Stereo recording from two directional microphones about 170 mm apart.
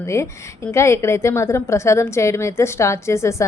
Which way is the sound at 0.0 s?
15° left (ahead or behind).